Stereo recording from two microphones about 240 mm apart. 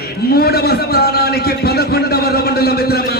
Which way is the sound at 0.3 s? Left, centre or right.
Left.